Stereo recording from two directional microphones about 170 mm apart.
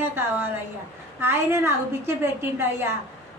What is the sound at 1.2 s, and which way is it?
A woman's voice, 15° right (ahead or behind).